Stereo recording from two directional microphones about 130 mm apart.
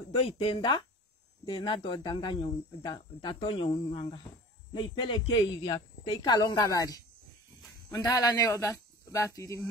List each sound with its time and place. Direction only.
0.1 s speech: 45° left (ahead or behind); by 9.7 s 25° left (ahead or behind)